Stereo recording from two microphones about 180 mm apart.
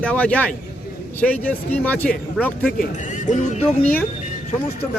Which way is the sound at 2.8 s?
45° left (ahead or behind).